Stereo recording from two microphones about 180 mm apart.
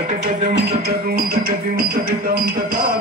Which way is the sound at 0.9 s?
55° right (ahead or behind).